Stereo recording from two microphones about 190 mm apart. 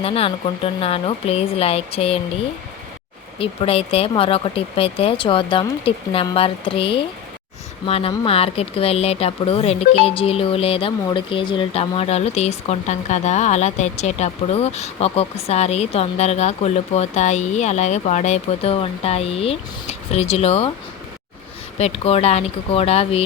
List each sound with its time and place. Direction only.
0.0 s speech: 30° left (ahead or behind)
3.3 s speech: 30° left (ahead or behind)
21.8 s speech: 35° left (ahead or behind)